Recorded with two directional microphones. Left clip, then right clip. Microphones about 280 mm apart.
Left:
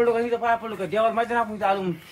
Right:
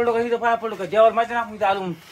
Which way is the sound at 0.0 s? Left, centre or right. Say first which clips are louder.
Right 2 dB; right.